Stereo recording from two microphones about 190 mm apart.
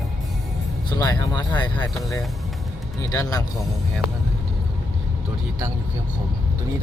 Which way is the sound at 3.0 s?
20° left (ahead or behind).